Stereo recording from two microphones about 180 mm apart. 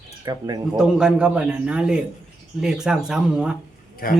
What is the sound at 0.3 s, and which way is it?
Speech, 20° right (ahead or behind).